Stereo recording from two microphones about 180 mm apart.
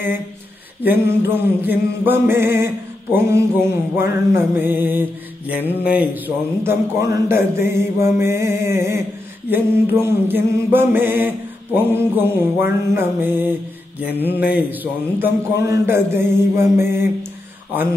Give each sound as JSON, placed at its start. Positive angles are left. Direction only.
{"t": 0.8, "sound": "mantra", "side_deg": -10}